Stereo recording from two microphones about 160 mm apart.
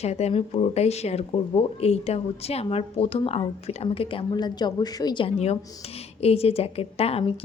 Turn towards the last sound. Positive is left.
turn(degrees=35)  # may be behind; listen again after turning